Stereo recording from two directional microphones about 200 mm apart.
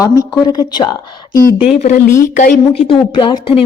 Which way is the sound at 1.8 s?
40° left (ahead or behind).